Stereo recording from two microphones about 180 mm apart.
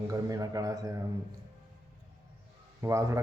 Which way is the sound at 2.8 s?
15° right (ahead or behind).